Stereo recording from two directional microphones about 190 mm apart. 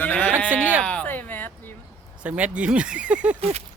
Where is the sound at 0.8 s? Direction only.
5° left (ahead or behind).